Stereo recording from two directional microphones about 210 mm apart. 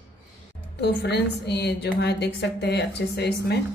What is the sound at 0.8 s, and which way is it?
A woman's voice, 50° left (ahead or behind).